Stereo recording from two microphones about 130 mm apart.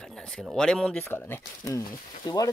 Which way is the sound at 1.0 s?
15° left (ahead or behind).